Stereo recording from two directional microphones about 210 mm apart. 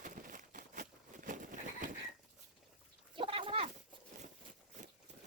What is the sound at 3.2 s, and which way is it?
Cat, 25° right (ahead or behind).